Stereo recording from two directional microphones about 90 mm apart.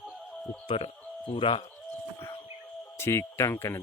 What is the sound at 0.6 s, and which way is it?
Speech, 90° left.